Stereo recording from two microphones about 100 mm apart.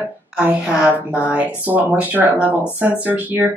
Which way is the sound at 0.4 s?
10° right (ahead or behind).